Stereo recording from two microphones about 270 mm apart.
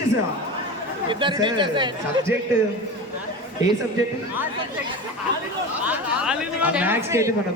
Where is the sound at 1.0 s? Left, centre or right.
Centre.